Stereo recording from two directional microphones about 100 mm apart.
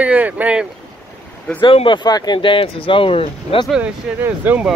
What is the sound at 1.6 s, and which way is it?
Speech, 60° left (ahead or behind).